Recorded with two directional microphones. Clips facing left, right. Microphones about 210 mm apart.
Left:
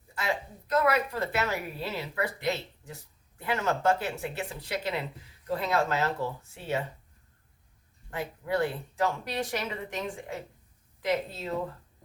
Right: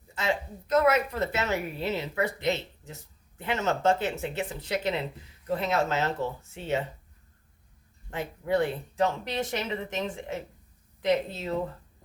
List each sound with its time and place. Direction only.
0.1 s a woman's voice: 20° right (ahead or behind)
8.1 s a woman's voice: 20° right (ahead or behind)